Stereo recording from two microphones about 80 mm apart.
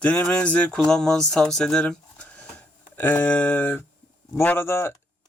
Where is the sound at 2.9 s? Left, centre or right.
Left.